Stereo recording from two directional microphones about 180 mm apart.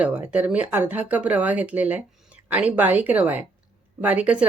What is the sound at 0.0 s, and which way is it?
Speech, 5° right (ahead or behind).